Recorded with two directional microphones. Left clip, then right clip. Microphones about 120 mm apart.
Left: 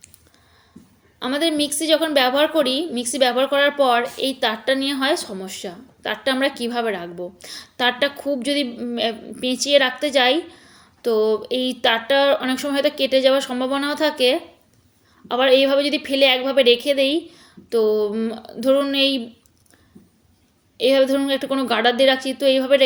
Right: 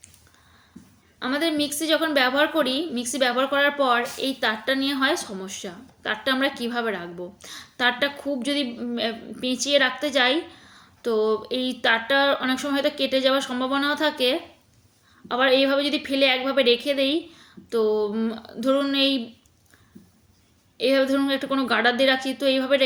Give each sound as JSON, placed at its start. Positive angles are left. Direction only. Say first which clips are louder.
{"t": 1.2, "sound": "a woman's voice", "louder": "left 3 dB", "side_deg": 25}
{"t": 20.7, "sound": "a woman's voice", "louder": "left 4 dB", "side_deg": 25}